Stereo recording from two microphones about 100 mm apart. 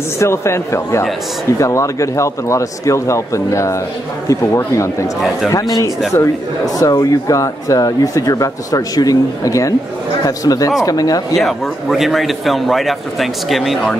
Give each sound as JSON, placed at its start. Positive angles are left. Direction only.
{"t": 0.2, "sound": "a man's voice", "side_deg": 25}
{"t": 11.3, "sound": "a man's voice", "side_deg": 0}